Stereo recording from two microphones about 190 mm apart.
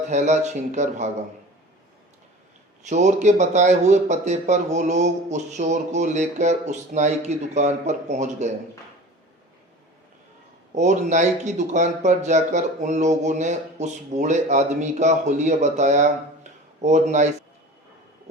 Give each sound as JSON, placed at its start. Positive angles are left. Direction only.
{"t": 0.1, "sound": "speech", "side_deg": -35}
{"t": 2.9, "sound": "speech", "side_deg": -40}
{"t": 10.8, "sound": "speech", "side_deg": -40}